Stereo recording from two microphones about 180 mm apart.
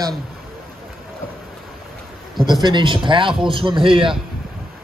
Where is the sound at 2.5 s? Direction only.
25° right (ahead or behind).